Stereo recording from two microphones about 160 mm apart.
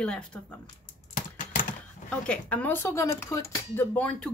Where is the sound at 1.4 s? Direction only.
55° left (ahead or behind).